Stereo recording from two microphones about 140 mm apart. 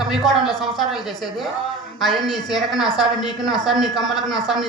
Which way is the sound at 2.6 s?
Centre (ahead or behind).